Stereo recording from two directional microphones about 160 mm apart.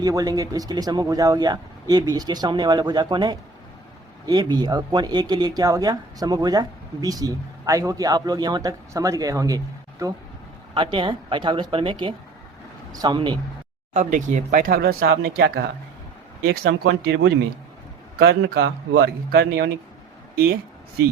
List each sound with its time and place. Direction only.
0.0 s speech: 25° right (ahead or behind)
10.8 s speech: 30° right (ahead or behind)
13.9 s speech: 55° right (ahead or behind); by 17.3 s 90° right
18.2 s speech: 75° right (ahead or behind)